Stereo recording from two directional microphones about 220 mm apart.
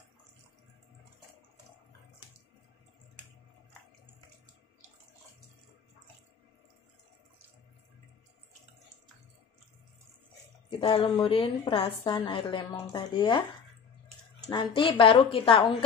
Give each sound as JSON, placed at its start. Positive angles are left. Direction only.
{"t": 10.8, "sound": "a woman's voice", "side_deg": 25}
{"t": 14.5, "sound": "a woman's voice", "side_deg": 20}